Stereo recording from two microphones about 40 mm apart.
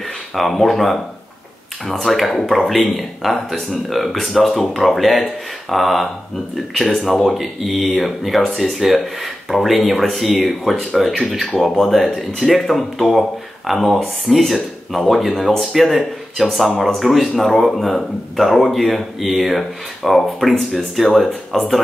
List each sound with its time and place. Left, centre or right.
0.3 s speech: centre